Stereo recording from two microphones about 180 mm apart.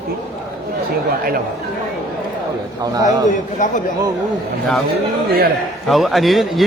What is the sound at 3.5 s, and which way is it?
Speech, 45° left (ahead or behind).